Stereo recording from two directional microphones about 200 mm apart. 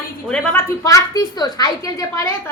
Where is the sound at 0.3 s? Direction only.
15° left (ahead or behind).